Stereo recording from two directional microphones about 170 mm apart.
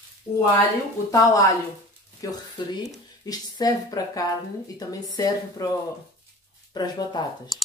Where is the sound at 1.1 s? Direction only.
20° left (ahead or behind).